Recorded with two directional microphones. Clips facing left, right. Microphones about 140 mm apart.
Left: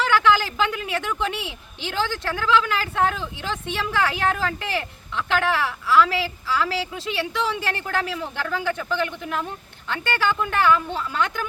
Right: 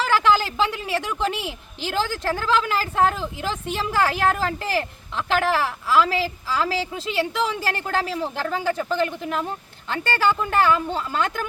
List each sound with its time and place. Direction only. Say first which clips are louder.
0.0 s speech: even; 35° right (ahead or behind)